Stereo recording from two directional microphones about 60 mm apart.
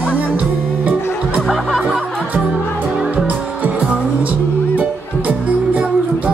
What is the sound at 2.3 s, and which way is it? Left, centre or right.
Music, right.